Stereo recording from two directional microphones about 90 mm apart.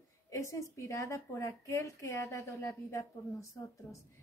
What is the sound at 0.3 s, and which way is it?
A woman's voice, 35° left (ahead or behind).